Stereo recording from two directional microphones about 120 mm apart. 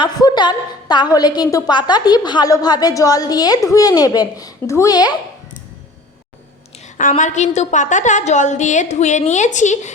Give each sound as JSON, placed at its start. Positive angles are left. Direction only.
{"t": 0.0, "sound": "a woman's voice", "side_deg": 35}
{"t": 6.7, "sound": "a woman's voice", "side_deg": 85}